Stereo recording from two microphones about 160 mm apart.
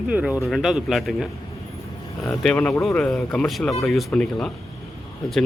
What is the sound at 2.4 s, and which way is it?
Speech, 10° left (ahead or behind).